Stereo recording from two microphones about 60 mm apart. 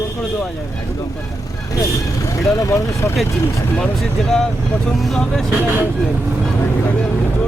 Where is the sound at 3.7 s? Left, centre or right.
Centre.